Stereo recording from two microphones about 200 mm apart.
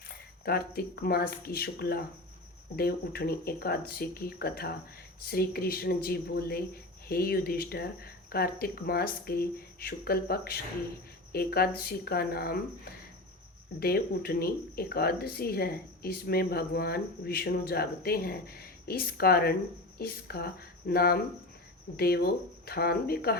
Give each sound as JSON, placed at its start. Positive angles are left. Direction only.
{"t": 0.1, "sound": "speech", "side_deg": 50}